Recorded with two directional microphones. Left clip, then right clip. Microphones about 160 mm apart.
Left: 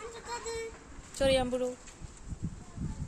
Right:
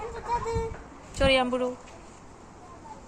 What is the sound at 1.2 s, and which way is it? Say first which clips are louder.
Speech: right 5 dB; 25° left (ahead or behind).